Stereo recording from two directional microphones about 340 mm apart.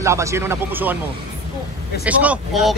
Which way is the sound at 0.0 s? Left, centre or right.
Centre.